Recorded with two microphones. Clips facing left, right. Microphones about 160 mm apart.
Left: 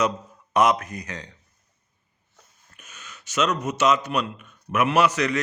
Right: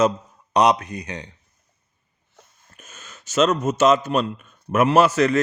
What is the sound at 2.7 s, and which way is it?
A man's voice, 45° right (ahead or behind).